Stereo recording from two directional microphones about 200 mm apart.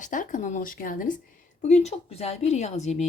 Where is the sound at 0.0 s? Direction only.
40° left (ahead or behind).